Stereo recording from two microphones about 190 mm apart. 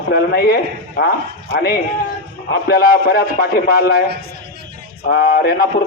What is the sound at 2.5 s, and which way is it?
A man's voice, 55° left (ahead or behind).